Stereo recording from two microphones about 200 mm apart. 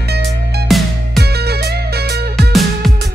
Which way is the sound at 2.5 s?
Centre (ahead or behind).